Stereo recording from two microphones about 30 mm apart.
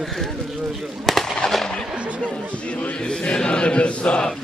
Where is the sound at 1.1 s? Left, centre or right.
Centre.